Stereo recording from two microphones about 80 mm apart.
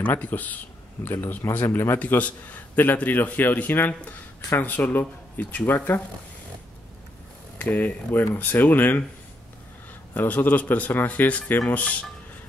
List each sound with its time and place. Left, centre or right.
0.0 s a man's voice: left
7.5 s a man's voice: centre
10.1 s a man's voice: left